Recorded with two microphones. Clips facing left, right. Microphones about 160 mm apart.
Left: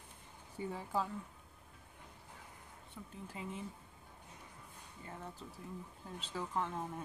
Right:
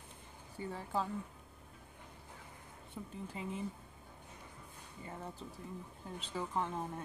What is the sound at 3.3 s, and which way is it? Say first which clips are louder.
Speech: right 2 dB; centre (ahead or behind).